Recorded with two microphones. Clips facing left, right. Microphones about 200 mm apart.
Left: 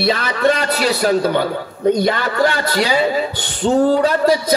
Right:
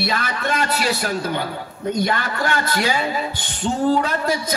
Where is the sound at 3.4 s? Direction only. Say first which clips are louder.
Left 8 dB; 55° left (ahead or behind).